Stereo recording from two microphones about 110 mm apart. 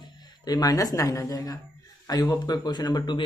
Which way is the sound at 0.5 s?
35° left (ahead or behind).